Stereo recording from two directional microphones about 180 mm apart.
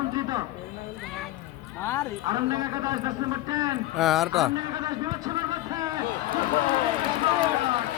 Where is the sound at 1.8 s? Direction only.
15° left (ahead or behind).